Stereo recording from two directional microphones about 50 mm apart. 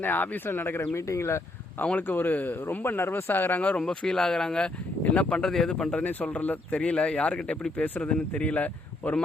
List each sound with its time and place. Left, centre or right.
0.0 s speech: left
2.0 s speech: left
3.8 s speech: centre
6.0 s speech: left
6.7 s speech: left